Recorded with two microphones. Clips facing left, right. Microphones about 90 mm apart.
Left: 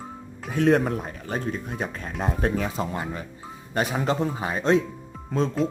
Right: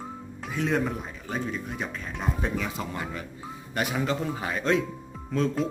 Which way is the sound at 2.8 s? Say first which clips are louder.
Left 4 dB; 30° left (ahead or behind).